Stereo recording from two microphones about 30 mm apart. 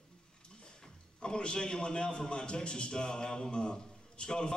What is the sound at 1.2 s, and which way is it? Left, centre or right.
A man's voice, left.